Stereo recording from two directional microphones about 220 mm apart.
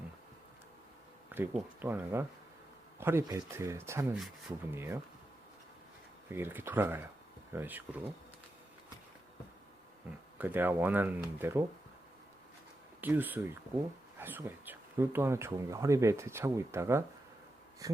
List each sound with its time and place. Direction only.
1.3 s speech: 10° right (ahead or behind)
6.3 s speech: 10° right (ahead or behind)
10.3 s speech: 10° right (ahead or behind)
13.0 s speech: 10° right (ahead or behind)